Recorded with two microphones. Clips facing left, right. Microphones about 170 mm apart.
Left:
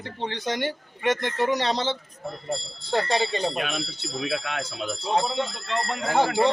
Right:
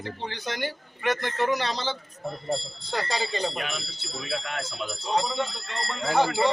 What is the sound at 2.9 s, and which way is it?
Speech, 25° left (ahead or behind).